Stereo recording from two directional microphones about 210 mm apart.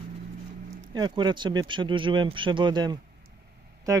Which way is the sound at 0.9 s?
20° right (ahead or behind).